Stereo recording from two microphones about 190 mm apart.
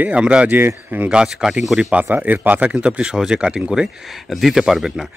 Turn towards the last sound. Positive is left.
turn(degrees=0)  # may be behind; listen again after turning